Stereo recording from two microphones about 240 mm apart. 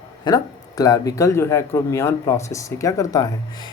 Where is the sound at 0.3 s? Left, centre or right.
Centre.